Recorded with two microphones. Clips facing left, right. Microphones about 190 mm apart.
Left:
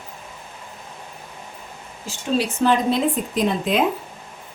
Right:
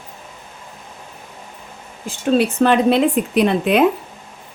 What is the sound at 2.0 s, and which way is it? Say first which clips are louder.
Speech: right 6 dB; 60° right (ahead or behind).